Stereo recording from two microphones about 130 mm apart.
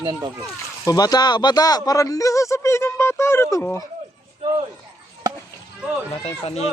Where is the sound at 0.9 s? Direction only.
30° left (ahead or behind).